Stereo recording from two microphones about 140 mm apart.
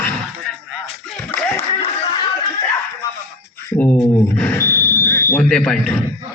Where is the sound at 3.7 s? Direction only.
10° left (ahead or behind).